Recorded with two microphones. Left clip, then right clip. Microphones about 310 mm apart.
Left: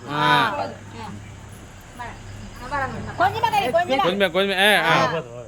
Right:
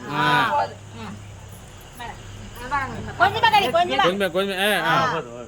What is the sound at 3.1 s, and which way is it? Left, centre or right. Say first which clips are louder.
Speech: right 3 dB; left.